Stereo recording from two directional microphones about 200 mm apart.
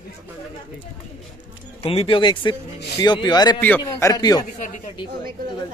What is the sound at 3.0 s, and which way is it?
Speech, 20° left (ahead or behind).